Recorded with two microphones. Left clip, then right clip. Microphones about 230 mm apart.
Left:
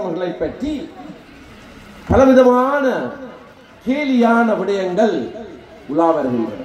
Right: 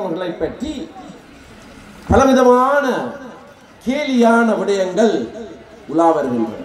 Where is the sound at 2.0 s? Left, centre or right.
Right.